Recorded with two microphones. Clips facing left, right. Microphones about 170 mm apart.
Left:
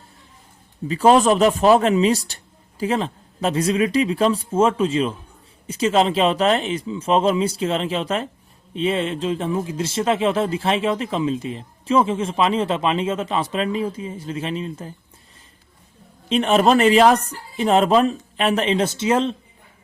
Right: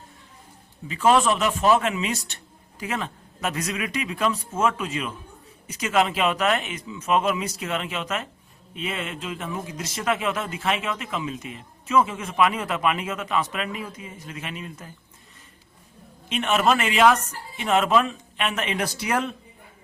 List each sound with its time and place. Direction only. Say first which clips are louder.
0.9 s speech: left 5 dB; 35° left (ahead or behind)
16.3 s speech: left 6 dB; 35° left (ahead or behind)